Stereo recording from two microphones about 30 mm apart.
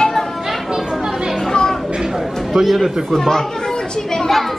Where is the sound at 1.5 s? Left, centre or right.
Left.